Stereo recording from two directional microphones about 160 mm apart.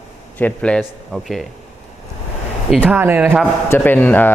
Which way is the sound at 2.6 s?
Centre (ahead or behind).